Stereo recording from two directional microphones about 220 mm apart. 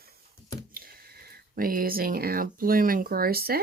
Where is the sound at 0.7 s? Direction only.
45° right (ahead or behind).